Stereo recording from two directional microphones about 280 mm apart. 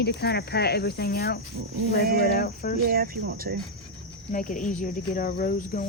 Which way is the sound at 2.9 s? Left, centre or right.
Right.